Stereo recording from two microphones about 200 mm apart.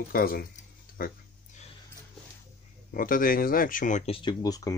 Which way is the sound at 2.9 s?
45° left (ahead or behind).